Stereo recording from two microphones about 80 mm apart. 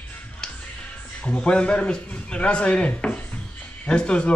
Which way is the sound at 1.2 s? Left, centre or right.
Centre.